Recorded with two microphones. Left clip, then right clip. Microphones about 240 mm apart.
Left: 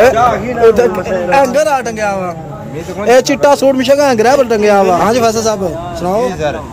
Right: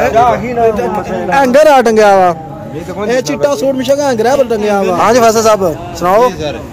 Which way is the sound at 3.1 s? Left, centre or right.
Centre.